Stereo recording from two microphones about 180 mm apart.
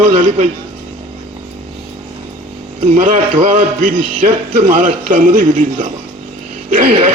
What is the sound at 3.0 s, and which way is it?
Speech, 45° right (ahead or behind).